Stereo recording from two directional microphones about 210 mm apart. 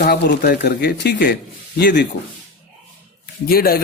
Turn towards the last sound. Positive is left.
turn(degrees=45)  # may be behind; listen again after turning